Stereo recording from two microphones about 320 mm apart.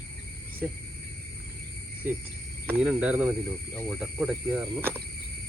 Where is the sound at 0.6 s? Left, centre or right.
Centre.